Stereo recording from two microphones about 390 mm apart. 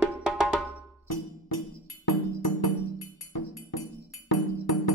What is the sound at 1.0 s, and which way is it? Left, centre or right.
Music, left.